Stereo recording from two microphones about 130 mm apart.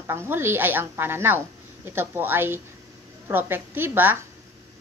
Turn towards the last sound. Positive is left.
turn(degrees=-15)  # may be behind; listen again after turning